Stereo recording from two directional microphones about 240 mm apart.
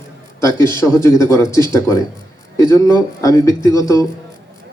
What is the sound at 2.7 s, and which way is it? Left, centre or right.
A man's voice, centre.